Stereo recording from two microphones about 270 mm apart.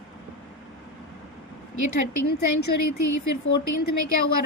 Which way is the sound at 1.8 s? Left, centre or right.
Left.